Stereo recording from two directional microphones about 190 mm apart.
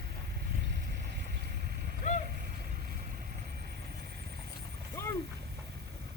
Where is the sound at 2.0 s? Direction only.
40° left (ahead or behind).